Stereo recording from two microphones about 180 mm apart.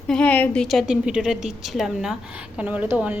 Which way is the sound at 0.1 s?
5° left (ahead or behind).